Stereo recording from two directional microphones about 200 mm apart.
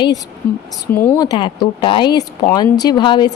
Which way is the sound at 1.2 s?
20° left (ahead or behind).